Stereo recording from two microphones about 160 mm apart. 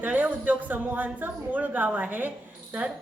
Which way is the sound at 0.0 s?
10° right (ahead or behind).